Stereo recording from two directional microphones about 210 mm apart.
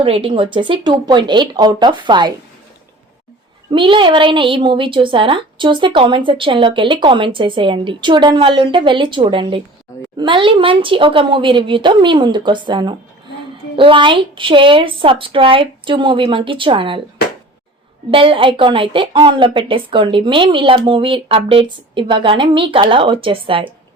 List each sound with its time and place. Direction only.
0.0 s a woman's voice: 25° right (ahead or behind)
3.7 s a woman's voice: 25° right (ahead or behind)
18.1 s a woman's voice: 25° right (ahead or behind)